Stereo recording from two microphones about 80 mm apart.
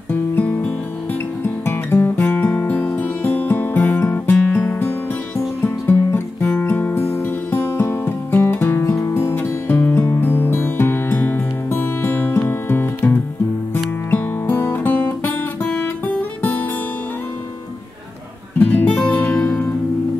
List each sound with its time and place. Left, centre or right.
0.1 s music: left
1.4 s music: left
7.0 s music: left
8.9 s music: left
18.6 s music: left